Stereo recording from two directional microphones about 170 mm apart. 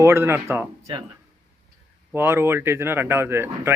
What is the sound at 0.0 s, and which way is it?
Speech, 15° right (ahead or behind).